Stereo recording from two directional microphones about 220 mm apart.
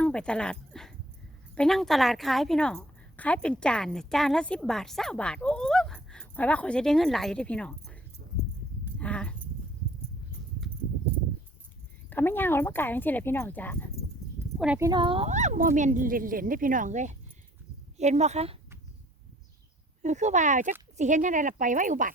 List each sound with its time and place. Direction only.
0.0 s a woman's voice: 5° left (ahead or behind)
8.2 s a sound: 40° right (ahead or behind)
9.0 s a sound: 5° left (ahead or behind)
12.1 s speech: 10° left (ahead or behind)
14.6 s a woman's voice: 5° right (ahead or behind)
14.8 s a woman's voice: 20° right (ahead or behind)
20.0 s speech: 30° right (ahead or behind)